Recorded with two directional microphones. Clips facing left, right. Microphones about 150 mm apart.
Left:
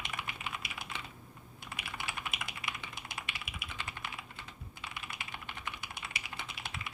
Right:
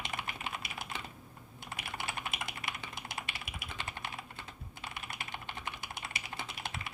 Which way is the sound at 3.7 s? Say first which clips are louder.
Right 2 dB; 30° right (ahead or behind).